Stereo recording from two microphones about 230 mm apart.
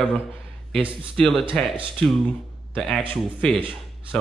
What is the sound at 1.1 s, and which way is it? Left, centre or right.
Speech, centre.